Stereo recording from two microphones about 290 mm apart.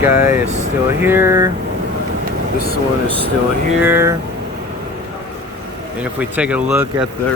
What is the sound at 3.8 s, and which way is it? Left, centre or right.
Speech, centre.